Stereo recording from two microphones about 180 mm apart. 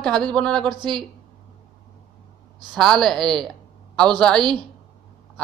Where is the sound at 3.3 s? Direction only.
5° left (ahead or behind).